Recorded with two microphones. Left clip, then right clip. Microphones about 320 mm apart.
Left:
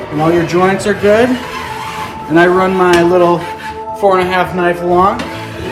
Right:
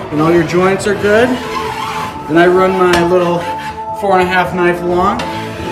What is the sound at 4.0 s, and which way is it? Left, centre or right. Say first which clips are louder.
Speech: left 1 dB; centre.